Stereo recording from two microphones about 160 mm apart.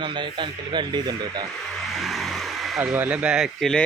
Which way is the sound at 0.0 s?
30° right (ahead or behind).